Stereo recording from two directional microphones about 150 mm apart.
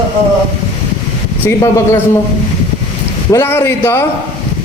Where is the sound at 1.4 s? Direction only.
20° left (ahead or behind).